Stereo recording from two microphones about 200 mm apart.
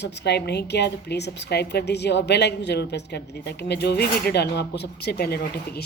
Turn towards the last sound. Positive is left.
turn(degrees=50)  # may be behind; listen again after turning